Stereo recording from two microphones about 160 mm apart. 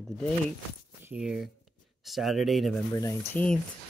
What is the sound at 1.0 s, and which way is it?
Speech, 5° right (ahead or behind).